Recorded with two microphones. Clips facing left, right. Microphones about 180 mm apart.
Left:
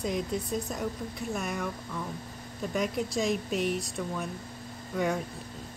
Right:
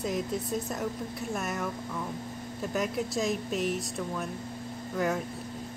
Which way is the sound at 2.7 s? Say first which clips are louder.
Left 1 dB; centre (ahead or behind).